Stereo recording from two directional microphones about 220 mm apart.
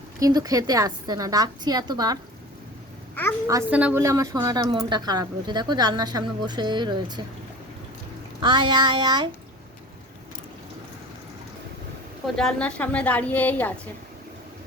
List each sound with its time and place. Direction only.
0.2 s a woman's voice: 15° right (ahead or behind)
3.4 s a woman's voice: 10° right (ahead or behind)
8.4 s a woman's voice: 20° right (ahead or behind)
12.4 s a woman's voice: 5° left (ahead or behind)